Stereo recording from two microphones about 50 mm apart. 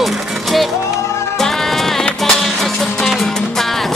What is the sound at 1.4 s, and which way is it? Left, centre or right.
Music, centre.